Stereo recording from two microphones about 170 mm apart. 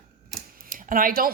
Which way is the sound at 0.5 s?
55° right (ahead or behind).